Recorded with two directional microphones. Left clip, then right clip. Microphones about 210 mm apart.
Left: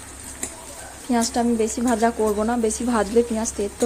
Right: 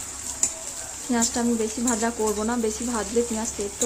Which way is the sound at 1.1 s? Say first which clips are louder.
Left 4 dB; 20° left (ahead or behind).